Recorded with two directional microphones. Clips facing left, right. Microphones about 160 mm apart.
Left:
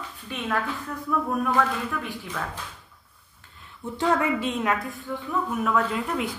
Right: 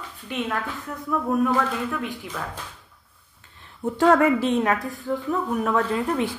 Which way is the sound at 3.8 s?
55° right (ahead or behind).